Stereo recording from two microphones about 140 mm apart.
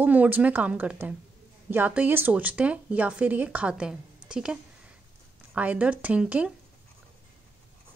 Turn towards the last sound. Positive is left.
turn(degrees=-10)  # may be behind; listen again after turning